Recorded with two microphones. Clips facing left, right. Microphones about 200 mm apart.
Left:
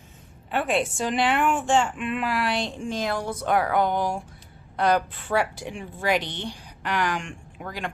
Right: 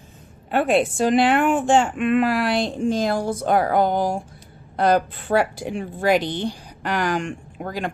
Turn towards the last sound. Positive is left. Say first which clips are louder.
# right 6 dB
turn(degrees=-40)  # may be behind; listen again after turning